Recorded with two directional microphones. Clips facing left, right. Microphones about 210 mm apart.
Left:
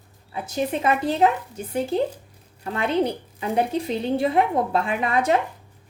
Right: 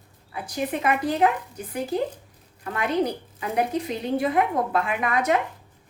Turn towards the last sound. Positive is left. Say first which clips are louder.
# left 2 dB
turn(degrees=30)  # may be behind; listen again after turning